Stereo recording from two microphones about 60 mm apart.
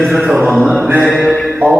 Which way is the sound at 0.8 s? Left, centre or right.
Right.